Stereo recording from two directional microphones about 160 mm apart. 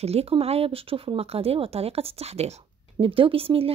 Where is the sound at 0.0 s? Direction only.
40° right (ahead or behind).